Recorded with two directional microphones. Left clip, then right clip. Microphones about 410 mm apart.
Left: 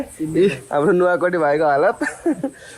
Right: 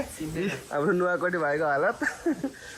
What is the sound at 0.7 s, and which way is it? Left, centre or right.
Speech, left.